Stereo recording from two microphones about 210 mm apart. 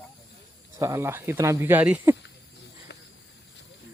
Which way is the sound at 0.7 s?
15° right (ahead or behind).